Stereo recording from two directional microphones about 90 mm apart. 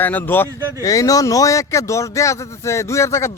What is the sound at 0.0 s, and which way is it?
Speech, 20° left (ahead or behind).